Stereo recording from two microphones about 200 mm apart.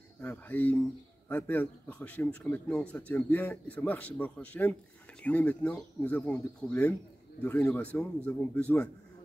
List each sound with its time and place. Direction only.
0.2 s a man's voice: 10° left (ahead or behind)